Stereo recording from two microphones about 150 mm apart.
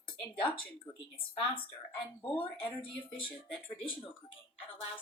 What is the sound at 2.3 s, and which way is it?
Speech, 35° left (ahead or behind).